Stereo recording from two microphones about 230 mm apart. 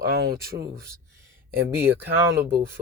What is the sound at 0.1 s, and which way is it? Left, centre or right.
Speech, right.